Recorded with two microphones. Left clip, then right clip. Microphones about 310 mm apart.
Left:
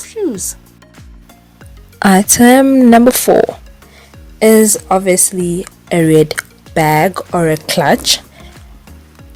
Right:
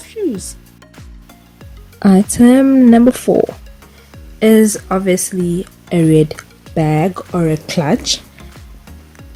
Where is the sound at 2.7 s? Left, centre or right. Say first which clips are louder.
Left 3 dB; left.